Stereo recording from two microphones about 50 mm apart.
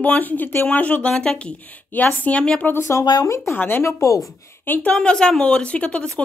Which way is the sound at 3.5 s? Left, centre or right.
Left.